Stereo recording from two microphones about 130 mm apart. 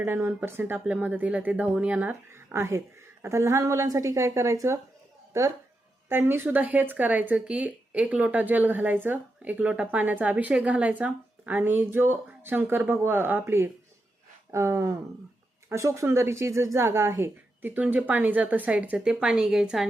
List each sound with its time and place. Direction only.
0.0 s speech: 15° right (ahead or behind)
6.1 s speech: 15° right (ahead or behind)